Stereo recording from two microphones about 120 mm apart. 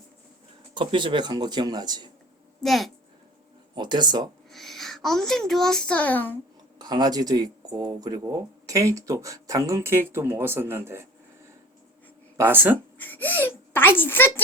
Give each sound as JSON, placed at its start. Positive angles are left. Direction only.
{"t": 0.7, "sound": "speech", "side_deg": -40}
{"t": 2.6, "sound": "a woman's voice", "side_deg": 0}
{"t": 3.8, "sound": "speech", "side_deg": -40}
{"t": 4.4, "sound": "a child's voice", "side_deg": 0}
{"t": 6.7, "sound": "speech", "side_deg": -35}
{"t": 12.4, "sound": "speech", "side_deg": -15}
{"t": 13.0, "sound": "whimper", "side_deg": 15}